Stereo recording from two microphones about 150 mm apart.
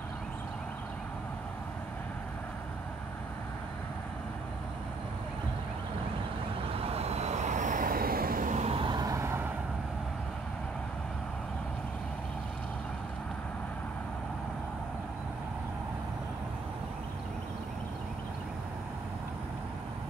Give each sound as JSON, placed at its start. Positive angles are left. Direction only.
{"t": 6.8, "sound": "vehicle", "side_deg": -45}